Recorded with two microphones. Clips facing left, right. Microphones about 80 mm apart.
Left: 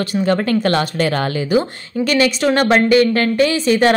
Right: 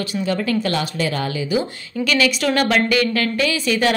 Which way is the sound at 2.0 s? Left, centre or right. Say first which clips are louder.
Left 3 dB; left.